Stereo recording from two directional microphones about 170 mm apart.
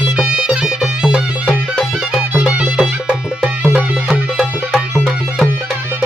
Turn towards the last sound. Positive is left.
turn(degrees=0)  # may be behind; listen again after turning